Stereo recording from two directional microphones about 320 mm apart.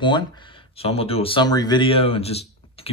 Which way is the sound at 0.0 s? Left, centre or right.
Centre.